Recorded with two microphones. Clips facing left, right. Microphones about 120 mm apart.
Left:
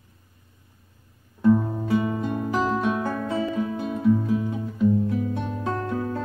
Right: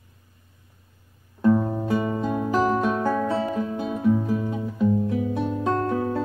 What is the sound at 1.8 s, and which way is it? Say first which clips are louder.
Music: even; 40° right (ahead or behind).